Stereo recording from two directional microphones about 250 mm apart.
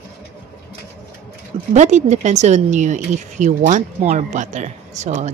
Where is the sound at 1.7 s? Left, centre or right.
Right.